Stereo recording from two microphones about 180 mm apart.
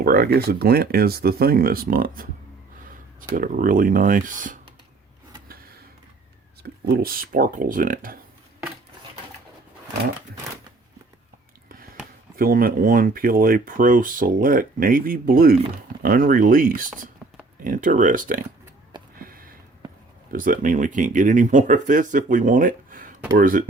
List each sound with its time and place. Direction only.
0.0 s speech: 60° right (ahead or behind)
3.3 s speech: 50° right (ahead or behind)
6.6 s speech: 55° right (ahead or behind)
12.4 s speech: 55° right (ahead or behind)
17.2 s a sound: 5° right (ahead or behind)
17.6 s speech: 50° right (ahead or behind)
18.9 s a sound: 25° right (ahead or behind)
19.3 s a sound: 55° right (ahead or behind)
20.3 s speech: 50° right (ahead or behind)